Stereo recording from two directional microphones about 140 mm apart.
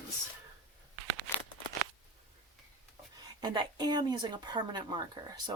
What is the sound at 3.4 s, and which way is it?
Speech, 35° right (ahead or behind).